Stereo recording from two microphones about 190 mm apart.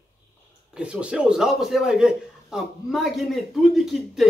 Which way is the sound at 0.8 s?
5° right (ahead or behind).